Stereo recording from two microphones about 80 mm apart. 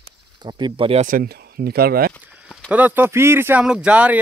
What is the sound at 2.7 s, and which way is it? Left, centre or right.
Speech, right.